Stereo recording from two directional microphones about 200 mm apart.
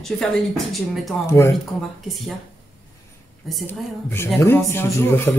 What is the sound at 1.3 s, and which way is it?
Speech, 15° left (ahead or behind).